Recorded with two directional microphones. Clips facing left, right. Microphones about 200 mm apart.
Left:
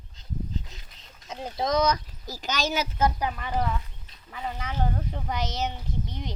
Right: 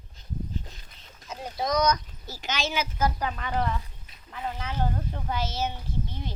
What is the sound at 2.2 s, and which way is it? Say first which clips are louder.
Speech: left 2 dB; 40° left (ahead or behind).